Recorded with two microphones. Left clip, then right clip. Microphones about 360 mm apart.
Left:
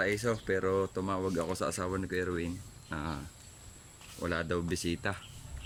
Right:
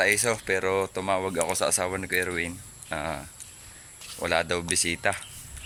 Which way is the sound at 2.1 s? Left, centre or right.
Right.